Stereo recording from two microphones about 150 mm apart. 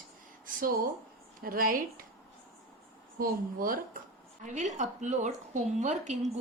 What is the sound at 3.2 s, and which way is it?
Speech, 70° right (ahead or behind).